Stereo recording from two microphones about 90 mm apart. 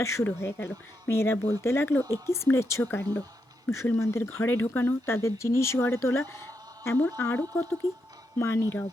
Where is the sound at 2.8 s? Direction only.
20° left (ahead or behind).